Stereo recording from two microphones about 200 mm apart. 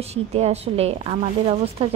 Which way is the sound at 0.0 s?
30° right (ahead or behind).